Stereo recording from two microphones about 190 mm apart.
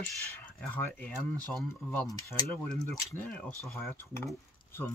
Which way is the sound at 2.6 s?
5° left (ahead or behind).